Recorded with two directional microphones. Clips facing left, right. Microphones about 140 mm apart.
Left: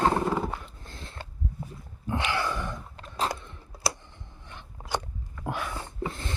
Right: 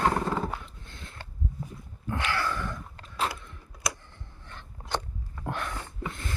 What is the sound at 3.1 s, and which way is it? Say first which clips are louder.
Biting: left 1 dB; 40° left (ahead or behind).